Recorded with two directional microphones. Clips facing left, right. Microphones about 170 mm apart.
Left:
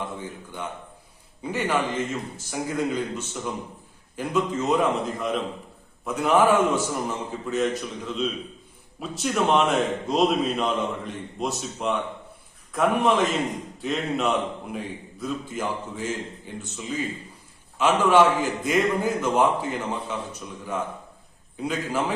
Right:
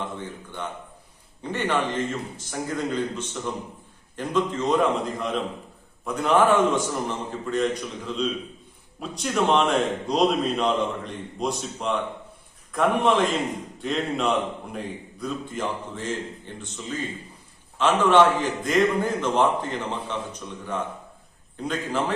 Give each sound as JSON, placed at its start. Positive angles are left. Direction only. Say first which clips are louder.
{"t": 0.0, "sound": "a man's voice", "louder": "even", "side_deg": 10}
{"t": 21.6, "sound": "a man's voice", "louder": "even", "side_deg": 10}